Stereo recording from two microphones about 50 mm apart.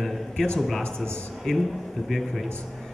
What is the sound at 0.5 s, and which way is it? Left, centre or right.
A man's voice, centre.